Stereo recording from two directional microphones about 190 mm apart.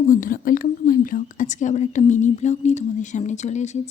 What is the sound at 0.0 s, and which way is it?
Speech, 45° left (ahead or behind).